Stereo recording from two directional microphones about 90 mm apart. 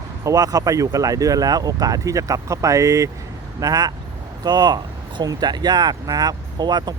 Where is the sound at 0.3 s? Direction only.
45° right (ahead or behind).